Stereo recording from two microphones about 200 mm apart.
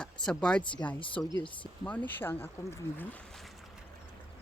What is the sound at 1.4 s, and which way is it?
Speech, 25° left (ahead or behind).